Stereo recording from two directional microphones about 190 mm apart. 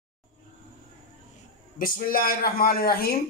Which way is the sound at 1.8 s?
50° left (ahead or behind).